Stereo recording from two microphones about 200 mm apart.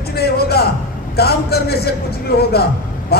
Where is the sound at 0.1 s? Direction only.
50° left (ahead or behind).